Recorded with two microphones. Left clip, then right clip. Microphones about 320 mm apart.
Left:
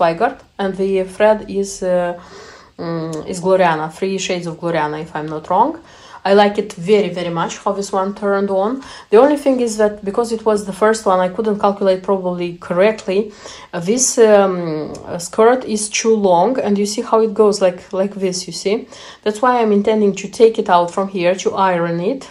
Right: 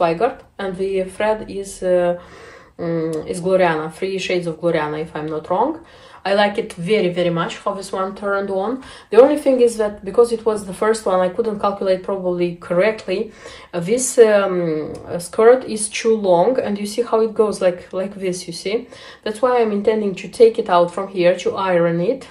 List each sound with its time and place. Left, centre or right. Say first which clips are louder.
0.2 s speech: left 2 dB; centre